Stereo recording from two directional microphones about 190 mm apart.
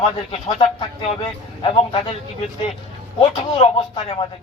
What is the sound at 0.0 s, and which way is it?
A man's voice, 30° left (ahead or behind).